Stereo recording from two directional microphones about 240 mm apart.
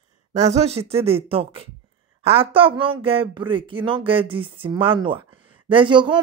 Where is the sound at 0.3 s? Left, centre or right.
Right.